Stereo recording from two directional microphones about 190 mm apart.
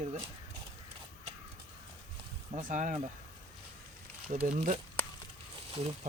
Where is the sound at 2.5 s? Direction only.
40° right (ahead or behind).